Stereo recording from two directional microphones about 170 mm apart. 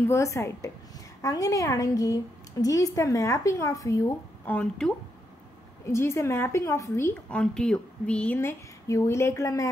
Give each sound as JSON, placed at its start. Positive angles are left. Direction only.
{"t": 0.1, "sound": "a woman's voice", "side_deg": 15}
{"t": 5.9, "sound": "a woman's voice", "side_deg": 15}